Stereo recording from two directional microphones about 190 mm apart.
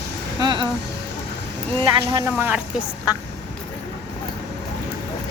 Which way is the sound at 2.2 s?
10° right (ahead or behind).